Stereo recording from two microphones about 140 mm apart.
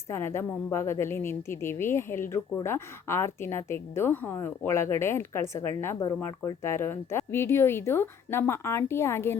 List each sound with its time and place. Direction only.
0.1 s a woman's voice: 20° left (ahead or behind)